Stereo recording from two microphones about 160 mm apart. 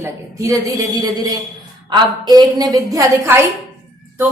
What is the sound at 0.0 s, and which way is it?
A woman's voice, 20° right (ahead or behind).